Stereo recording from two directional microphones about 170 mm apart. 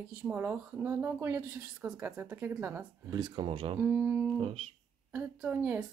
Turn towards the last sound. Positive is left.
turn(degrees=-10)  # may be behind; listen again after turning